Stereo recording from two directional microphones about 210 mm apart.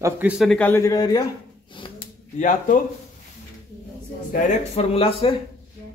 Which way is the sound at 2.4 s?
35° left (ahead or behind).